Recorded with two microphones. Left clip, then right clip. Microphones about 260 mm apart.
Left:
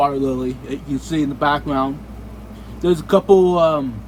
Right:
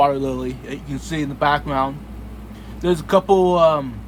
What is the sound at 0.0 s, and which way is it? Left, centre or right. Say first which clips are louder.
Speech: even; right.